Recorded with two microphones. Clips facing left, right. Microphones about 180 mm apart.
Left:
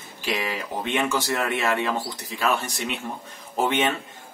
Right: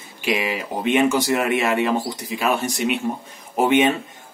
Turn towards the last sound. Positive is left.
turn(degrees=-15)  # may be behind; listen again after turning